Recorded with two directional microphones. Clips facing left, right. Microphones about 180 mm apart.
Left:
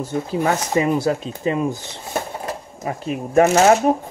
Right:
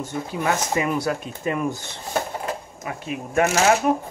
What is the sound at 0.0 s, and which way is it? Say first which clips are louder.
Speech: left 5 dB; 30° left (ahead or behind).